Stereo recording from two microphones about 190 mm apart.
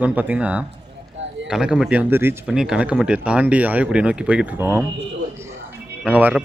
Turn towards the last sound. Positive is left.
turn(degrees=-5)  # may be behind; listen again after turning